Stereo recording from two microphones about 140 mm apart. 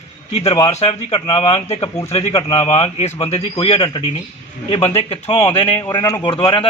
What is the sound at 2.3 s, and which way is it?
Speech, 30° left (ahead or behind).